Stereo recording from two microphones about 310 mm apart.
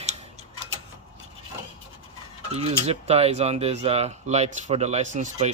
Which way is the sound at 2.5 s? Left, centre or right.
Centre.